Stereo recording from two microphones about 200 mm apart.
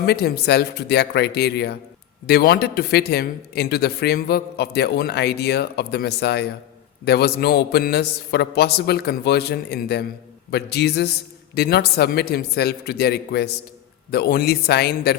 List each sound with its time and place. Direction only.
0.0 s a man's voice: 55° left (ahead or behind)